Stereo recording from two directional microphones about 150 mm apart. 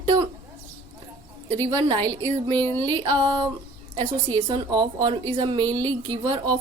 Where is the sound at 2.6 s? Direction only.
15° left (ahead or behind).